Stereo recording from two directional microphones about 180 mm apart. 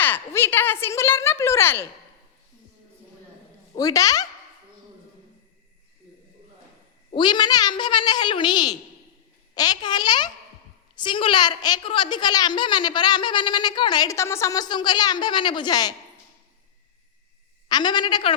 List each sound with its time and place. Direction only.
0.0 s a woman's voice: 10° left (ahead or behind)
3.8 s a woman's voice: 20° left (ahead or behind)
7.1 s a woman's voice: 25° left (ahead or behind)
17.7 s a woman's voice: 25° left (ahead or behind)